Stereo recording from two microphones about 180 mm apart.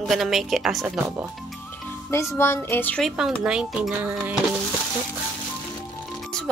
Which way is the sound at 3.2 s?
5° right (ahead or behind).